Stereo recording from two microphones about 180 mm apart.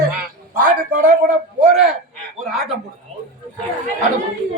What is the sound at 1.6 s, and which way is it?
Speech, 5° right (ahead or behind).